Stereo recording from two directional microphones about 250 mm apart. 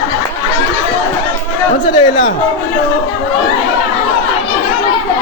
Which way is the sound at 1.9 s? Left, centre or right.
Centre.